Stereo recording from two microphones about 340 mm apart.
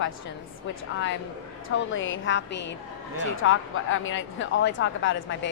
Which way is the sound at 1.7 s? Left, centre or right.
Left.